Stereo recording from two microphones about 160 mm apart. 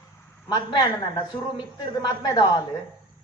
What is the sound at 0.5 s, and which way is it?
A woman's voice, 25° left (ahead or behind).